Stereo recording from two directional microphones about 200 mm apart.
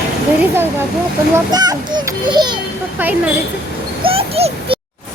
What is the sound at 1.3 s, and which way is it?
A child's voice, 20° right (ahead or behind).